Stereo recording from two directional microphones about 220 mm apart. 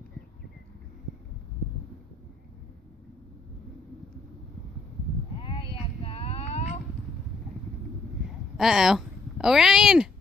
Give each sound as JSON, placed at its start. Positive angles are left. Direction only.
{"t": 5.4, "sound": "child singing", "side_deg": 20}
{"t": 8.5, "sound": "speech", "side_deg": 0}